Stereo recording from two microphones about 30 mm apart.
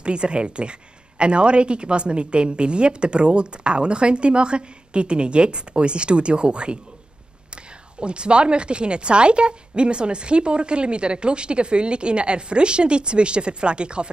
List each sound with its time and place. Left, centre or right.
0.0 s a woman's voice: right